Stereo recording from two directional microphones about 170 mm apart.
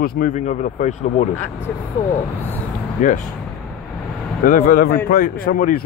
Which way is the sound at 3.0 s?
45° left (ahead or behind).